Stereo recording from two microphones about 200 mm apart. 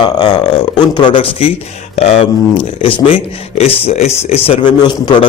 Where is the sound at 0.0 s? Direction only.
20° left (ahead or behind).